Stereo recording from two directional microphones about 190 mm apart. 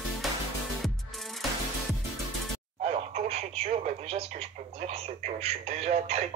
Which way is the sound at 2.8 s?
35° right (ahead or behind).